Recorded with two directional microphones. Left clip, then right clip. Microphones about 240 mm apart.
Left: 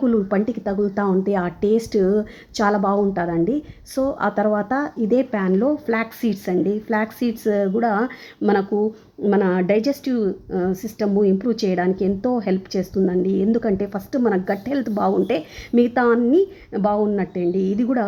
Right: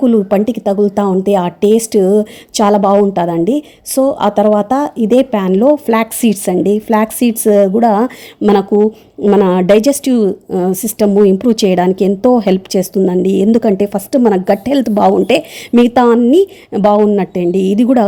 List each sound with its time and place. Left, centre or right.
0.0 s a woman's voice: right